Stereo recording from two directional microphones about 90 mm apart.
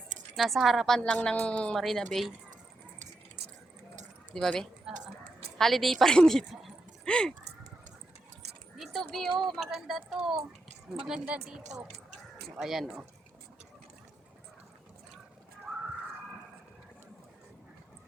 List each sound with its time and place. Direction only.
0.3 s a woman's voice: centre (ahead or behind)
1.8 s a woman's voice: centre (ahead or behind)
4.4 s a woman's voice: 5° left (ahead or behind)
4.9 s a woman's voice: 5° right (ahead or behind); by 7.3 s 10° left (ahead or behind)
8.7 s keys jangling: centre (ahead or behind)
9.4 s a woman's voice: centre (ahead or behind)